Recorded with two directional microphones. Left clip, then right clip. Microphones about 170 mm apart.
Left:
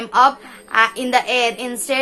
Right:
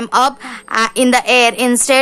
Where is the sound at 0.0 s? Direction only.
40° right (ahead or behind).